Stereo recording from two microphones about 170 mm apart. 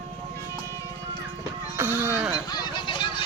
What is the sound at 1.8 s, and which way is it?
Sheep, 10° right (ahead or behind).